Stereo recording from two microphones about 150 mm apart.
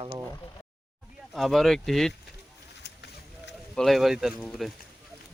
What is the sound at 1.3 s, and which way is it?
Speech, centre (ahead or behind).